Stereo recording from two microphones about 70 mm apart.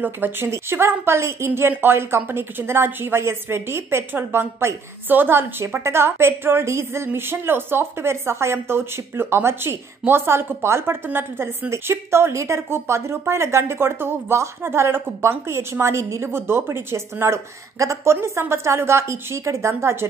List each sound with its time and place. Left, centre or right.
0.0 s speech: right